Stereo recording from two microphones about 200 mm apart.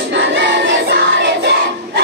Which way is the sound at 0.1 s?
60° right (ahead or behind).